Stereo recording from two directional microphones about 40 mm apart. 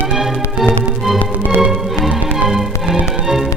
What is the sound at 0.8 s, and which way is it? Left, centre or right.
Music, centre.